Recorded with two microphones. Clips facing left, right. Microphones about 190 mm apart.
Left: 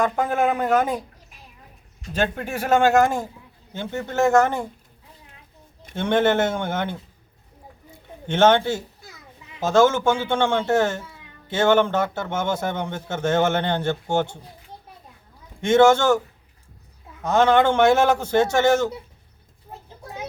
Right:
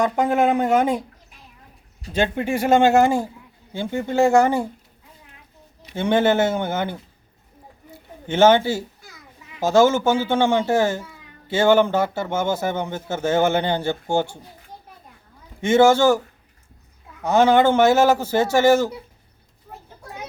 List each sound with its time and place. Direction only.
0.0 s speech: 20° right (ahead or behind)
2.3 s speech: 10° right (ahead or behind)
5.9 s speech: 10° right (ahead or behind)
7.9 s a sound: 10° right (ahead or behind)
9.6 s speech: 10° right (ahead or behind)
15.6 s speech: 10° right (ahead or behind)
17.2 s speech: 10° right (ahead or behind)
19.7 s a sound: 20° left (ahead or behind)